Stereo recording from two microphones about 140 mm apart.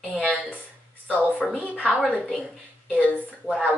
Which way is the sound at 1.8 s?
10° right (ahead or behind).